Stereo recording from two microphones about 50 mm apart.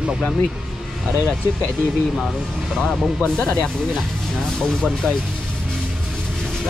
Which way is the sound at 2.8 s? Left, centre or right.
Centre.